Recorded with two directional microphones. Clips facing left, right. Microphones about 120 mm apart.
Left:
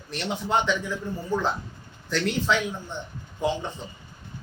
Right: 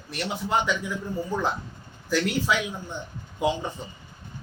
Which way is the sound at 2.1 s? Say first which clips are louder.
Right 3 dB; 5° right (ahead or behind).